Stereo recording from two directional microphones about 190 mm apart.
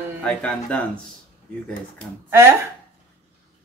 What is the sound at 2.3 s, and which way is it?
Speech, 15° right (ahead or behind).